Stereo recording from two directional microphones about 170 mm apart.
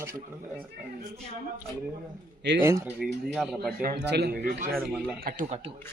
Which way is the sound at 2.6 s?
15° right (ahead or behind).